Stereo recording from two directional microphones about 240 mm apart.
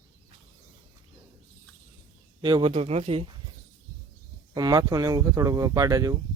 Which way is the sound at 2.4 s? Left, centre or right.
Centre.